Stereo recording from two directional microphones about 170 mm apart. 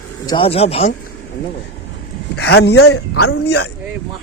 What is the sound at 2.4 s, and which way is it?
Speech, 75° left (ahead or behind).